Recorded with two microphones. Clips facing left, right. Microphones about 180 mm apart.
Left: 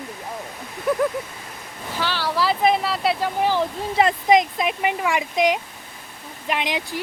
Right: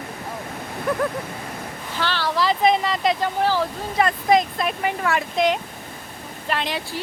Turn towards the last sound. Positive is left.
turn(degrees=15)  # may be behind; listen again after turning